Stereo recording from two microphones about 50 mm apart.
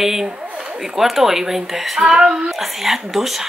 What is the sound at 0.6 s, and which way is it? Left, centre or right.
Speech, centre.